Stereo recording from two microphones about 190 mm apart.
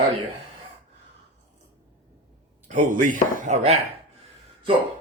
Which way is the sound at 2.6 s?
40° right (ahead or behind).